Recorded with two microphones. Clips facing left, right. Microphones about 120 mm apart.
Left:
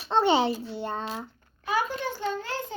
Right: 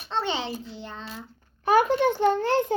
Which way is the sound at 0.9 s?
50° left (ahead or behind).